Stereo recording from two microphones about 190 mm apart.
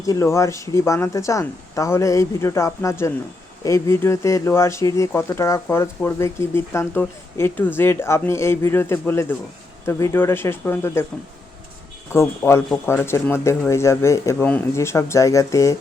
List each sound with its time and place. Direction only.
0.0 s speech: 15° left (ahead or behind)
12.1 s speech: 15° left (ahead or behind)